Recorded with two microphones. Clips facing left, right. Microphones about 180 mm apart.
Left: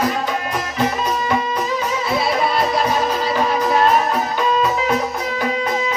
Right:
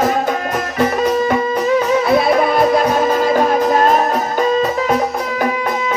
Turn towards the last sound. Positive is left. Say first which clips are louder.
# right 3 dB
turn(degrees=-45)  # may be behind; listen again after turning